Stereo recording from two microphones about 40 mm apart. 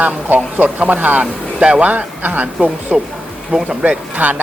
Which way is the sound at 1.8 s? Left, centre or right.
Right.